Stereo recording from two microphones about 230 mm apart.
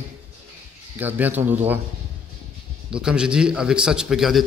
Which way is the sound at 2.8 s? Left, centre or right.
Centre.